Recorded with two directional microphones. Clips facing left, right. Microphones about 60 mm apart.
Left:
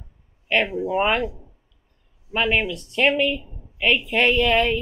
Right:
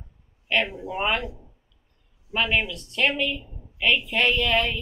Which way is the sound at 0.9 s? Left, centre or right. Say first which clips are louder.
Left 4 dB; left.